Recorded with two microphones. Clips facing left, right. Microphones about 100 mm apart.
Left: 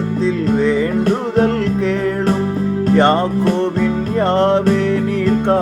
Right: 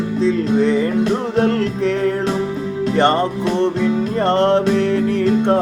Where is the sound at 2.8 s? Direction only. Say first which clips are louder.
Left 2 dB; 45° left (ahead or behind).